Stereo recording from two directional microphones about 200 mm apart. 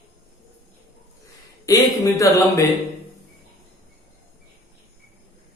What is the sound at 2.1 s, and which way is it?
Speech, 15° left (ahead or behind).